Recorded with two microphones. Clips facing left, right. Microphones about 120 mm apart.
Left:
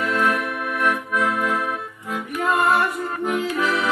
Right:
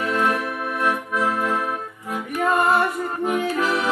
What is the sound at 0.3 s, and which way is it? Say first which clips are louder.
Accordion: even; 30° right (ahead or behind).